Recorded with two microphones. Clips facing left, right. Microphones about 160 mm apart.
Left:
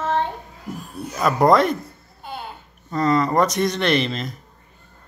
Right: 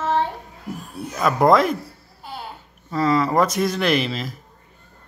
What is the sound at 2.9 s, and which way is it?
Speech, 5° right (ahead or behind).